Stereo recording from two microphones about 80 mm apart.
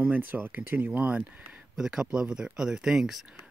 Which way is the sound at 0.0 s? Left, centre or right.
Right.